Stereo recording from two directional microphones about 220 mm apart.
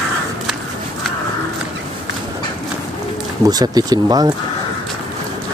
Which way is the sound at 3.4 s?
15° right (ahead or behind).